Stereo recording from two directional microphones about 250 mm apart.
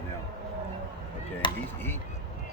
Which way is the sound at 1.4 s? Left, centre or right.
Centre.